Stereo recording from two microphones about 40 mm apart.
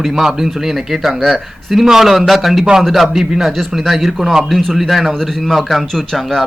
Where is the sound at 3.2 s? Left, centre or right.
Centre.